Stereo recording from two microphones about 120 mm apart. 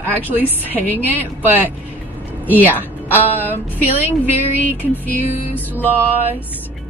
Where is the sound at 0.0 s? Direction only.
15° right (ahead or behind).